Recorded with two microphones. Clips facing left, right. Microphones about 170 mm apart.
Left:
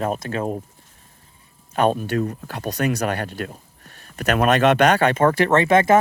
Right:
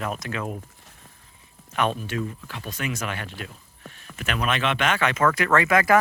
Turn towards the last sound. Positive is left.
turn(degrees=25)  # may be behind; listen again after turning